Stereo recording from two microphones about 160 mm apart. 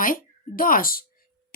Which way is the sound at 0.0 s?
60° left (ahead or behind).